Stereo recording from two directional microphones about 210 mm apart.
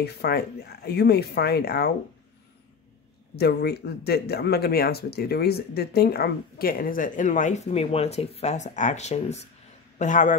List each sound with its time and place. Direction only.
0.0 s speech: 50° left (ahead or behind)
3.3 s a man's voice: 50° left (ahead or behind)